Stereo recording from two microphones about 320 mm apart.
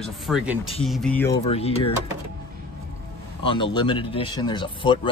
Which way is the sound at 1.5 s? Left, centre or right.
Centre.